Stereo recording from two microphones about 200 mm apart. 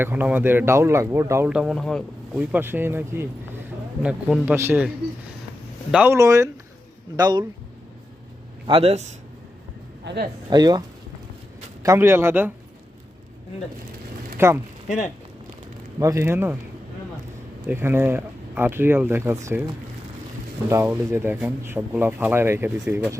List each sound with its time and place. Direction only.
0.0 s speech: 10° right (ahead or behind)
5.9 s speech: 10° right (ahead or behind)
8.6 s speech: 30° right (ahead or behind)
10.0 s speech: 60° right (ahead or behind)
10.5 s speech: 20° right (ahead or behind)
14.3 s speech: 15° right (ahead or behind)
14.8 s speech: 35° left (ahead or behind)
16.0 s speech: 15° right (ahead or behind)
17.7 s speech: 10° right (ahead or behind)
20.7 s speech: 10° right (ahead or behind)